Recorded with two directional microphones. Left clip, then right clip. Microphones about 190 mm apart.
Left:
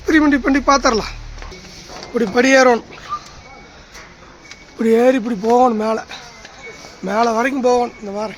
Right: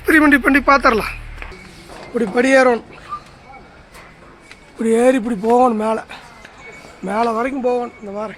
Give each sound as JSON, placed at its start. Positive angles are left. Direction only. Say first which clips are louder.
{"t": 0.0, "sound": "speech", "louder": "right 2 dB", "side_deg": -5}
{"t": 2.1, "sound": "speech", "louder": "left 1 dB", "side_deg": 5}
{"t": 2.9, "sound": "a sound", "louder": "left 3 dB", "side_deg": 15}
{"t": 4.8, "sound": "speech", "louder": "left 1 dB", "side_deg": 0}
{"t": 7.0, "sound": "speech", "louder": "left 2 dB", "side_deg": 10}
{"t": 7.3, "sound": "speech", "louder": "left 3 dB", "side_deg": 40}